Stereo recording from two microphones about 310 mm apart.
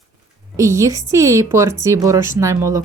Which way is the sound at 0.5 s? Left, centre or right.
Centre.